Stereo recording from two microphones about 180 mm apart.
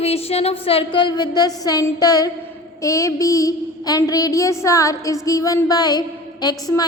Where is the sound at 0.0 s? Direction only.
35° left (ahead or behind).